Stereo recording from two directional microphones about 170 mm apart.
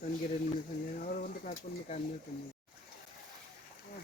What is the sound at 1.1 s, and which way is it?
Speech, 55° left (ahead or behind).